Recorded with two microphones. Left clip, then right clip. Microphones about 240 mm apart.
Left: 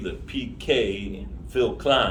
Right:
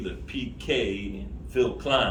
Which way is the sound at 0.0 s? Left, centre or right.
Centre.